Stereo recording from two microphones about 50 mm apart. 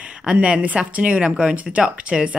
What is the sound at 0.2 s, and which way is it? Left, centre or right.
Speech, right.